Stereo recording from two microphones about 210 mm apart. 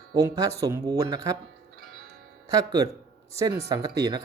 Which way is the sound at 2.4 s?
15° right (ahead or behind).